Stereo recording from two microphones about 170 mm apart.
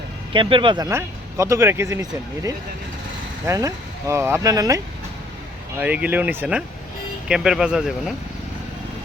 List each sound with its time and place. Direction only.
0.3 s speech: 30° right (ahead or behind)
0.9 s speech: 15° right (ahead or behind)
5.8 s speech: 10° right (ahead or behind)